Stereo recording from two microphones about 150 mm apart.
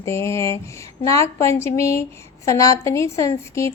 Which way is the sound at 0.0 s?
20° left (ahead or behind).